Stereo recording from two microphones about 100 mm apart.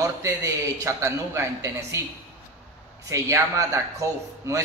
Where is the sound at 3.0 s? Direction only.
30° right (ahead or behind).